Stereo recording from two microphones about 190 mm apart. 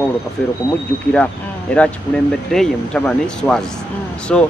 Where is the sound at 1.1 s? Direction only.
5° left (ahead or behind).